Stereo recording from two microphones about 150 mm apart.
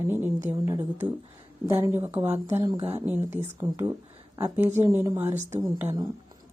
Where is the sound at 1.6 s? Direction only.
15° right (ahead or behind).